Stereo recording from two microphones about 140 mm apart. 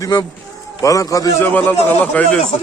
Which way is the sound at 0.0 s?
25° left (ahead or behind).